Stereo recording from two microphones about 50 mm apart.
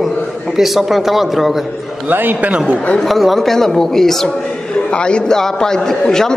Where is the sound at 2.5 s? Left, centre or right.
Right.